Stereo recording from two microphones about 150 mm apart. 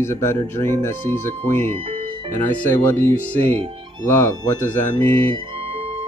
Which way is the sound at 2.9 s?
15° left (ahead or behind).